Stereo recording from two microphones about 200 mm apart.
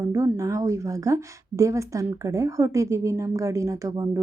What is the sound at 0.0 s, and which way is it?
A woman's voice, 15° right (ahead or behind).